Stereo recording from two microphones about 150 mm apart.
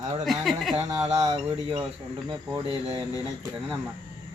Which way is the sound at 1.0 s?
25° right (ahead or behind).